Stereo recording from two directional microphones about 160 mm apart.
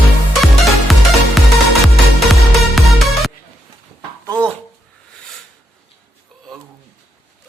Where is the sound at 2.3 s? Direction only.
Centre (ahead or behind).